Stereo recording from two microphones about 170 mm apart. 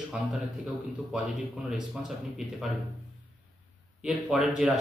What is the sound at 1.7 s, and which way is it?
A man's voice, 5° right (ahead or behind).